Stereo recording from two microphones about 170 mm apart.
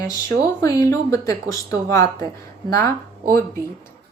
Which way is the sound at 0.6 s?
20° left (ahead or behind).